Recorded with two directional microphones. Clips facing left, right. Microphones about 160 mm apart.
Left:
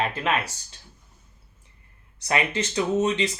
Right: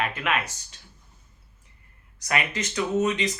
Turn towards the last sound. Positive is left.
turn(degrees=30)  # may be behind; listen again after turning